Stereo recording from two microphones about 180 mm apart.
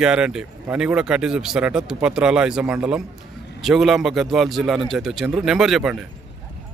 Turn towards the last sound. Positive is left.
turn(degrees=-5)  # may be behind; listen again after turning